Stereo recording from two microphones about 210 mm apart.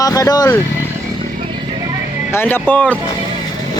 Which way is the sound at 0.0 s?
15° left (ahead or behind).